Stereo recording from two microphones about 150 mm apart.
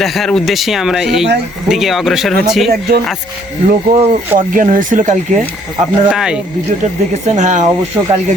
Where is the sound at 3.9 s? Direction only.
40° right (ahead or behind).